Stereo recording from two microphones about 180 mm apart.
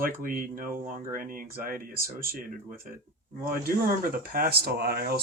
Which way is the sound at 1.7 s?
55° right (ahead or behind).